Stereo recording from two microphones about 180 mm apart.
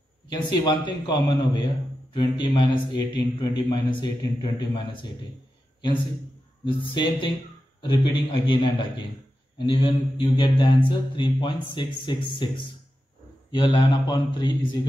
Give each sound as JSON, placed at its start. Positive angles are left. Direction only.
{"t": 0.5, "sound": "speech", "side_deg": 25}
{"t": 6.6, "sound": "speech", "side_deg": 25}